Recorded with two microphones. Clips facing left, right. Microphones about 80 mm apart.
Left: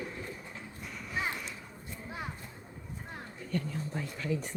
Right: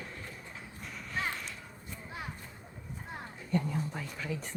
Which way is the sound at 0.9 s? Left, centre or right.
Centre.